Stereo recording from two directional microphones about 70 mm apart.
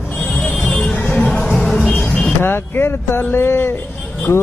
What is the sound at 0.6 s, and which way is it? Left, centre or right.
Music, centre.